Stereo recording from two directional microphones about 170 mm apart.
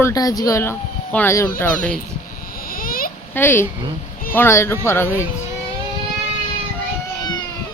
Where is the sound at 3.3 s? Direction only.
15° left (ahead or behind).